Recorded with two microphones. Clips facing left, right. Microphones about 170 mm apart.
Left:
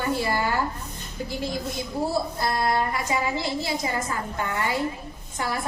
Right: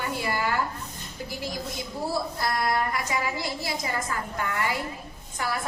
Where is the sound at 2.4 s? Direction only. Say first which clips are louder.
Left 1 dB; 25° left (ahead or behind).